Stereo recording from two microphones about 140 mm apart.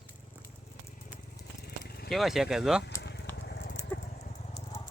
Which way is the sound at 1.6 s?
90° left.